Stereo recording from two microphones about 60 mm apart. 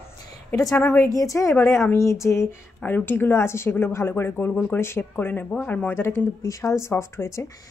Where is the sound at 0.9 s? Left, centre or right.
Left.